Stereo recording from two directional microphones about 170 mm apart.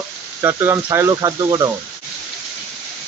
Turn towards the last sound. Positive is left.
turn(degrees=-25)  # may be behind; listen again after turning